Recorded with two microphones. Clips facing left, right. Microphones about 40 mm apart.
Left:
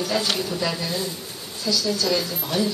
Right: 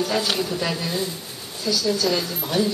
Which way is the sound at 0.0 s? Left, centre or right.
Centre.